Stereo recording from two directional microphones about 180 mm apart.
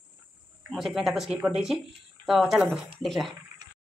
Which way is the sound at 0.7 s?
Centre (ahead or behind).